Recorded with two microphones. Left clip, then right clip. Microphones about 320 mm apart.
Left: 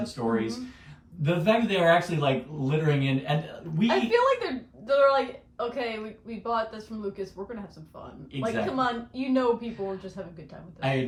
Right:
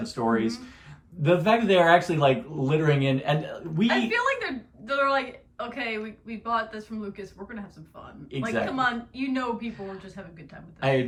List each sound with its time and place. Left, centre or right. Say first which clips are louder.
0.0 s speech: right 3 dB; centre
3.8 s a woman's voice: left 2 dB; centre
8.4 s a woman's voice: right 1 dB; centre